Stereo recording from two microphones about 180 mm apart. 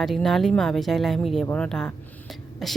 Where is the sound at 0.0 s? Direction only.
Centre (ahead or behind).